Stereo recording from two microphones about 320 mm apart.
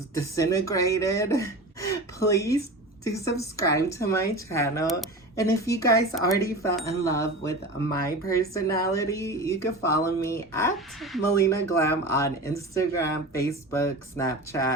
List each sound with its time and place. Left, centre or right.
0.1 s speech: centre